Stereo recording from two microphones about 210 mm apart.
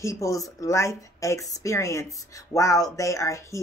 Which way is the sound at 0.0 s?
15° left (ahead or behind).